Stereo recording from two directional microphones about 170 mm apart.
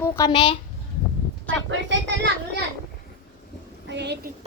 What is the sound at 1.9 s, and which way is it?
Speech, 90° right.